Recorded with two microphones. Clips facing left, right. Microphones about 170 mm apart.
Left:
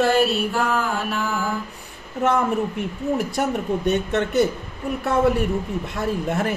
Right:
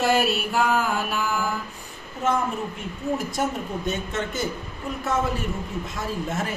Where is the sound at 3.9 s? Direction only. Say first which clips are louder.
Left 7 dB; 65° left (ahead or behind).